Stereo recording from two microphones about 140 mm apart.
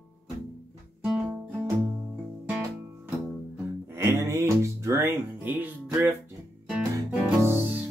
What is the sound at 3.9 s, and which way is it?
Music, 20° right (ahead or behind).